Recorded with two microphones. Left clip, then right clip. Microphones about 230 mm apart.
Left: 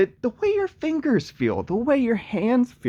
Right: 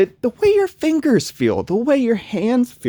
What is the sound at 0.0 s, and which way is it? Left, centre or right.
Speech, right.